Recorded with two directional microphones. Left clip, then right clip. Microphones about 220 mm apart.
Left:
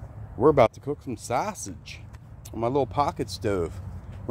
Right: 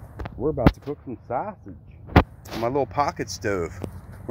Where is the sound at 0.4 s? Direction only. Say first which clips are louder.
Left 4 dB; 20° left (ahead or behind).